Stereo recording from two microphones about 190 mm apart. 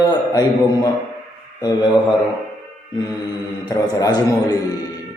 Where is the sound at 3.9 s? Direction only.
20° left (ahead or behind).